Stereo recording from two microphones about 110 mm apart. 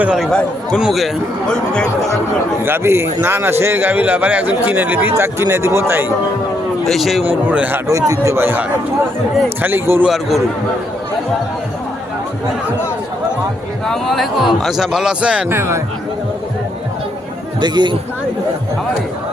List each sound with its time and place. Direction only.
0.2 s a man's voice: 5° left (ahead or behind)
2.6 s a man's voice: 20° right (ahead or behind)
6.8 s a man's voice: centre (ahead or behind)
7.3 s a man's voice: 15° right (ahead or behind)
7.9 s a man's voice: 30° right (ahead or behind)
10.1 s a man's voice: centre (ahead or behind)
13.8 s a man's voice: 5° left (ahead or behind)
15.4 s a man's voice: 25° right (ahead or behind)
17.6 s speech: 45° right (ahead or behind)